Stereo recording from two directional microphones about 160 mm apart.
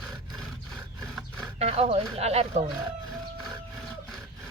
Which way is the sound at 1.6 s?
40° right (ahead or behind).